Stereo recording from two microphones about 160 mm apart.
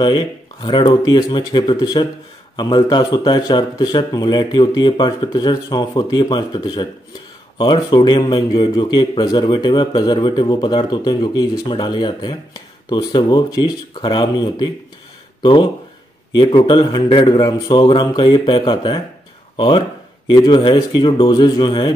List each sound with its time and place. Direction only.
0.0 s a man's voice: 30° left (ahead or behind)